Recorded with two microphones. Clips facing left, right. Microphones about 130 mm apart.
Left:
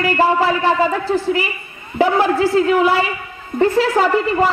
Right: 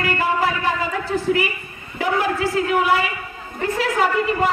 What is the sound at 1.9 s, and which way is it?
A woman's voice, 30° left (ahead or behind).